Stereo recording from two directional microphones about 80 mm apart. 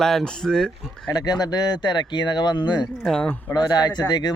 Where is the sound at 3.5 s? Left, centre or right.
Left.